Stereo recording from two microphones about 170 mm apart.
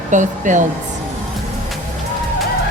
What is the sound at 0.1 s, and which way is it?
Speech, 45° right (ahead or behind).